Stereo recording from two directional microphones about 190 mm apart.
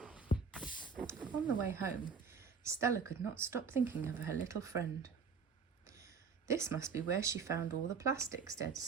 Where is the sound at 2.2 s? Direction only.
15° right (ahead or behind).